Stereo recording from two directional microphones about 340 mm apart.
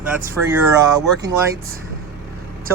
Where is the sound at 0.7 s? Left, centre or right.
Centre.